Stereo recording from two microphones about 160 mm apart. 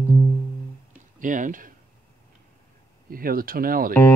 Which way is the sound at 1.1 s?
55° right (ahead or behind).